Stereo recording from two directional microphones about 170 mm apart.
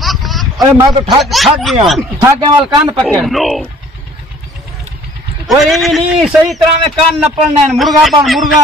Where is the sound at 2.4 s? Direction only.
25° right (ahead or behind).